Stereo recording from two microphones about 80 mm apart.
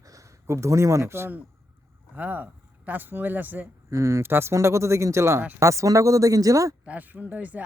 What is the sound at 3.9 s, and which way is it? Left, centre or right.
A man's voice, right.